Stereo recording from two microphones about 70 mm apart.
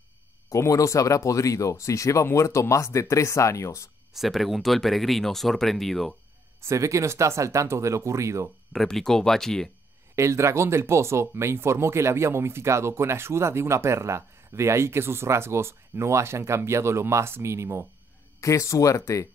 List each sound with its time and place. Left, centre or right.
0.5 s speech: left
4.1 s speech: centre
6.6 s speech: right
8.7 s speech: centre
10.1 s speech: right
18.4 s speech: left